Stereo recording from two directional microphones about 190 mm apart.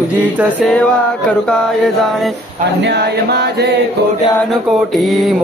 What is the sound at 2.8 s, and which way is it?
Male singing, 60° right (ahead or behind).